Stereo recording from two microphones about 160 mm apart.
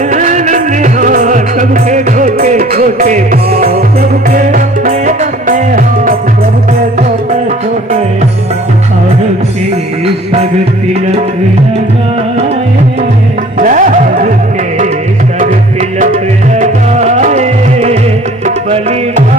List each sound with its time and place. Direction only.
0.1 s music: 50° right (ahead or behind); by 3.8 s 70° right (ahead or behind)
4.3 s music: 55° right (ahead or behind)
13.6 s music: 55° right (ahead or behind)
16.0 s music: 50° right (ahead or behind)